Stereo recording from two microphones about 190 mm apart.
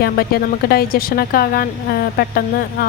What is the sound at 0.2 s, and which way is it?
A woman's voice, 50° left (ahead or behind).